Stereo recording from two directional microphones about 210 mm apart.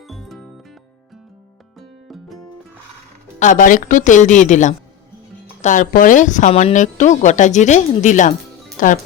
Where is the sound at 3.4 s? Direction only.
40° left (ahead or behind).